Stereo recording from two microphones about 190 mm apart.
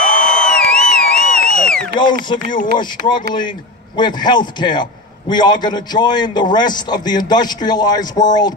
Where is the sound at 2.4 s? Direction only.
45° left (ahead or behind).